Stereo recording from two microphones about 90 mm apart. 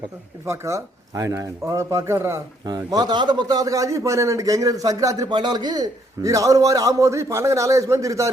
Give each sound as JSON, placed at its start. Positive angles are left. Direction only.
{"t": 0.4, "sound": "a man's voice", "side_deg": -35}
{"t": 2.6, "sound": "a man's voice", "side_deg": -50}
{"t": 5.3, "sound": "a man's voice", "side_deg": -55}